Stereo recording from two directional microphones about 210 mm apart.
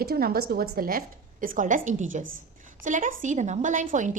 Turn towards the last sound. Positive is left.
turn(degrees=-35)  # may be behind; listen again after turning